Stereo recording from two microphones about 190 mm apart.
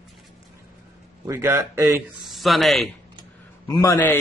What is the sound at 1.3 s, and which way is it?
Speech, 15° right (ahead or behind).